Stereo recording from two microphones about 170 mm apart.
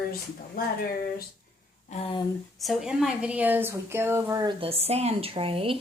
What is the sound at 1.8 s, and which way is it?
Speech, 40° left (ahead or behind).